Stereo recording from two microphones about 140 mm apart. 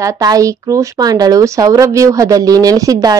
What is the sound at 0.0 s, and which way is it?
Speech, 25° right (ahead or behind).